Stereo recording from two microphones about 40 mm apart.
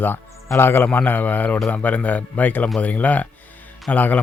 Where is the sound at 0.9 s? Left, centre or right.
Left.